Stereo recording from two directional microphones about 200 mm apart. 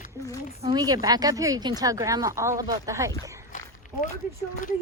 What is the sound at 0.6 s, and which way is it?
Speech, 20° right (ahead or behind).